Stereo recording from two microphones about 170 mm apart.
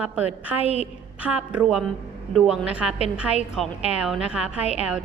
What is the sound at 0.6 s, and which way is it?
Speech, 40° left (ahead or behind).